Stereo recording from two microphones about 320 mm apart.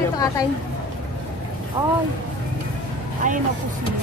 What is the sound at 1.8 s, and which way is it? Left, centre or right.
Speech, centre.